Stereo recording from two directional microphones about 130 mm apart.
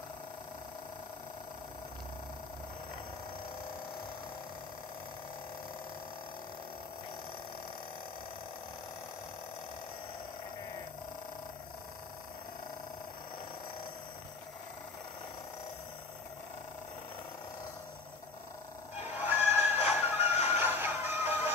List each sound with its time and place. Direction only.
19.1 s music: 15° right (ahead or behind)
20.0 s a sound: 15° right (ahead or behind)
20.5 s music: 15° right (ahead or behind)